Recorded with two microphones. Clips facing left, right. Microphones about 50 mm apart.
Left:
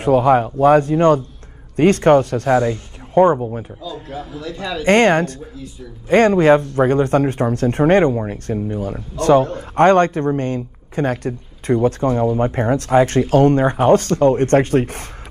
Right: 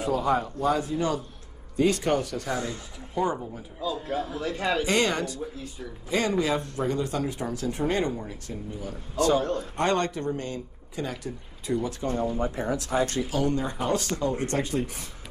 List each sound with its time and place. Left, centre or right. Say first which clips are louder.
0.0 s speech: left 11 dB; left
4.3 s a man's voice: left 3 dB; right
4.8 s speech: left 12 dB; left